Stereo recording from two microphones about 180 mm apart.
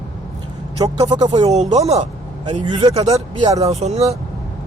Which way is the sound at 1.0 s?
20° right (ahead or behind).